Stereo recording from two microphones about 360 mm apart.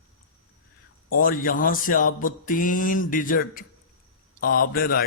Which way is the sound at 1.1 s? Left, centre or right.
Left.